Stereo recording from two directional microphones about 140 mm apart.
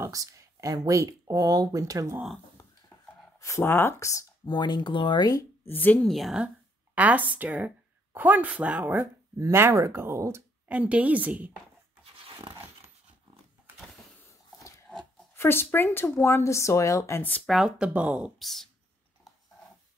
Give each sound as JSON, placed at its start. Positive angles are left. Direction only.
{"t": 0.0, "sound": "speech", "side_deg": -25}
{"t": 2.6, "sound": "a sound", "side_deg": 25}
{"t": 3.3, "sound": "speech", "side_deg": 20}
{"t": 5.7, "sound": "speech", "side_deg": 10}
{"t": 6.1, "sound": "speech", "side_deg": -5}
{"t": 12.0, "sound": "a sound", "side_deg": -35}
{"t": 15.3, "sound": "speech", "side_deg": 15}
{"t": 17.5, "sound": "speech", "side_deg": -5}